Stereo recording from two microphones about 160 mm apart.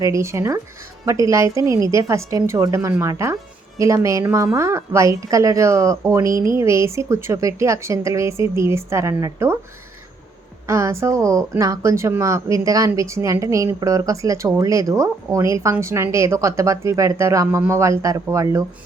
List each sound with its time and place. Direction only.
0.0 s speech: 20° right (ahead or behind)
10.7 s speech: 20° right (ahead or behind)